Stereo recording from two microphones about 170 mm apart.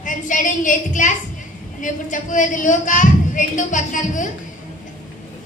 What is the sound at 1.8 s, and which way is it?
A woman's voice, 50° left (ahead or behind).